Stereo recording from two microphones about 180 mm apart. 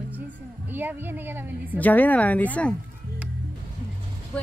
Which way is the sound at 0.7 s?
10° right (ahead or behind).